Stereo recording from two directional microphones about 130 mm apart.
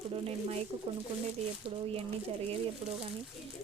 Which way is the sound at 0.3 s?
55° right (ahead or behind).